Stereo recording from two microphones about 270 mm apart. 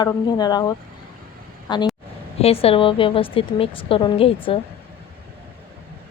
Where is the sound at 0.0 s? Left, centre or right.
Centre.